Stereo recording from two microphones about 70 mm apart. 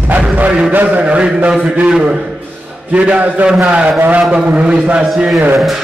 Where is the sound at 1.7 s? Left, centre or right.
Centre.